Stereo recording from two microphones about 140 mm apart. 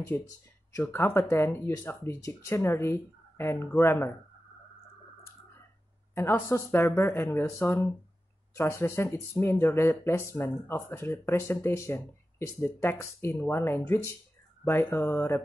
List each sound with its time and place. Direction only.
0.0 s speech: 15° left (ahead or behind)
6.1 s speech: 20° left (ahead or behind)